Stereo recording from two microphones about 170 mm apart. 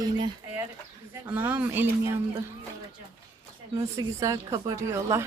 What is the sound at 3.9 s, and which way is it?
A woman's voice, 20° right (ahead or behind).